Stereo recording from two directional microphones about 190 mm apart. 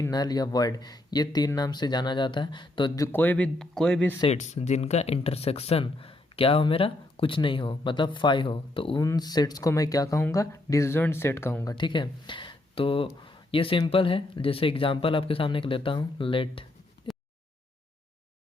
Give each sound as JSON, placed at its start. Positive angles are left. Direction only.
{"t": 0.0, "sound": "speech", "side_deg": 20}
{"t": 4.2, "sound": "speech", "side_deg": 35}
{"t": 17.1, "sound": "a sound", "side_deg": 25}